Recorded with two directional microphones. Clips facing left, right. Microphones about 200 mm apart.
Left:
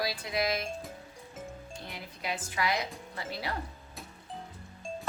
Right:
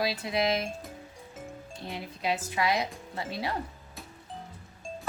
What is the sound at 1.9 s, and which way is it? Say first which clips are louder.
Speech: right 7 dB; 25° right (ahead or behind).